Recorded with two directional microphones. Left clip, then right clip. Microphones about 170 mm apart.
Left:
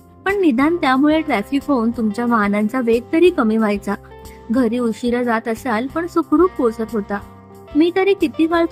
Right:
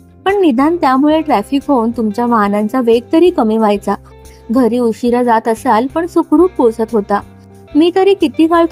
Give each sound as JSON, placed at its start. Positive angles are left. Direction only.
{"t": 0.3, "sound": "speech", "side_deg": -10}